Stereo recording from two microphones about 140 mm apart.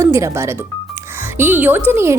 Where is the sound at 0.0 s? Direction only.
20° right (ahead or behind).